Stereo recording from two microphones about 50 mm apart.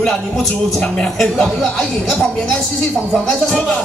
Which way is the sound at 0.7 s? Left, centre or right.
Centre.